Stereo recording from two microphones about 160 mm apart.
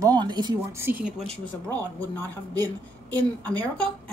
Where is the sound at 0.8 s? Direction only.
10° right (ahead or behind).